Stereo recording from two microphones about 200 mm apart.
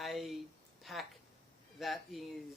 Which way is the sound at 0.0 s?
Centre (ahead or behind).